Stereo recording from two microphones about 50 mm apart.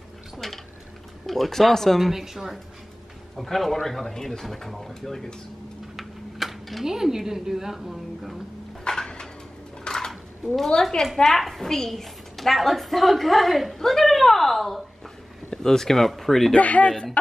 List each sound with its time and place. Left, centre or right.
0.4 s speech: centre
8.8 s dishes: centre
9.8 s speech: centre
16.5 s speech: left